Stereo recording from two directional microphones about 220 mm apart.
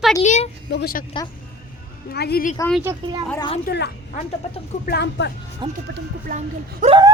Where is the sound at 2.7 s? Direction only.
10° right (ahead or behind).